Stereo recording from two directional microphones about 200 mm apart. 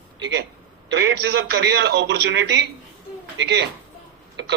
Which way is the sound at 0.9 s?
60° right (ahead or behind).